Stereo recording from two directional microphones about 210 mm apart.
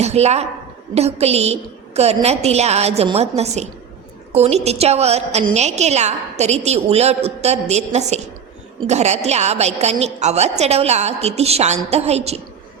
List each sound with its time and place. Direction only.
0.0 s a woman's voice: 30° right (ahead or behind)